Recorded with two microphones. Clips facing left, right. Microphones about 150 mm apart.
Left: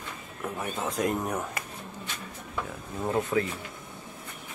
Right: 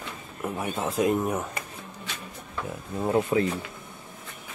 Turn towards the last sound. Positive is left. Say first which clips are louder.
# right 3 dB
turn(degrees=-20)  # may be behind; listen again after turning